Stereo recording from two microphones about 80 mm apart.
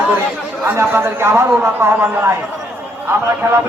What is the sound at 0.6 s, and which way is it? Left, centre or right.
A man's voice, right.